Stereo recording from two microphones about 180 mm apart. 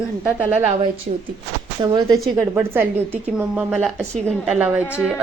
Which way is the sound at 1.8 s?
20° right (ahead or behind).